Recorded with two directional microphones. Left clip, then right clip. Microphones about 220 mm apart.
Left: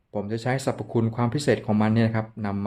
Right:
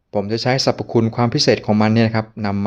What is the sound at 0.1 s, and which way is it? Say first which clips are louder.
Speech: right 9 dB; 30° right (ahead or behind).